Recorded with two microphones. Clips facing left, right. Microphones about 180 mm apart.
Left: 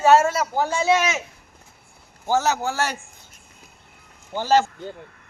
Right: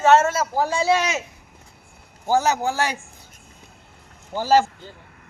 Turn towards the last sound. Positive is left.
turn(degrees=-10)  # may be behind; listen again after turning